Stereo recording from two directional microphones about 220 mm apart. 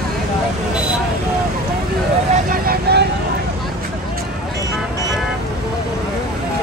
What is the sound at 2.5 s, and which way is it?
Vehicle, 40° right (ahead or behind).